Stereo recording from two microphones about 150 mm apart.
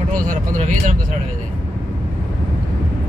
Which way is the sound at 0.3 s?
60° right (ahead or behind).